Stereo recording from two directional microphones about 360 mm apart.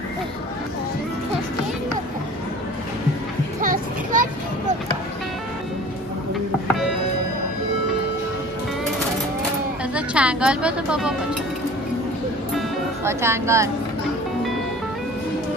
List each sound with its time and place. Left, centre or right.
3.6 s children playing: right
9.9 s speech: centre
12.5 s music: centre